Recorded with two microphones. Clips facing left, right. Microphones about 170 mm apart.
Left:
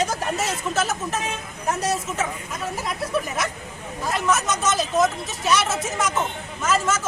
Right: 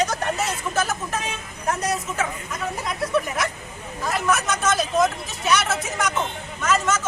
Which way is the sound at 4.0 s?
Centre (ahead or behind).